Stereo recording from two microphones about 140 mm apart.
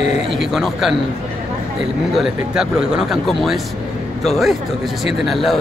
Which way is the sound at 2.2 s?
5° right (ahead or behind).